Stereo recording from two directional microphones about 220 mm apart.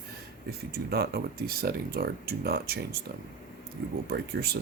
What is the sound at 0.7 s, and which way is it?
Speech, 45° right (ahead or behind).